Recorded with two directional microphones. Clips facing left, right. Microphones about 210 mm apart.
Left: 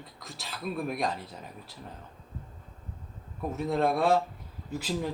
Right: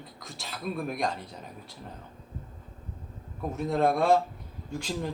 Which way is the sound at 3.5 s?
Centre (ahead or behind).